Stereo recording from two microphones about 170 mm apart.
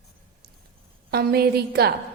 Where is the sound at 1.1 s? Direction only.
65° right (ahead or behind).